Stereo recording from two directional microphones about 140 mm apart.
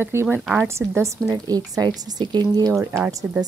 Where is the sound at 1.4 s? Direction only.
25° right (ahead or behind).